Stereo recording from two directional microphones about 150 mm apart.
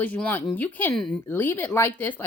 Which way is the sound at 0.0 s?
10° left (ahead or behind).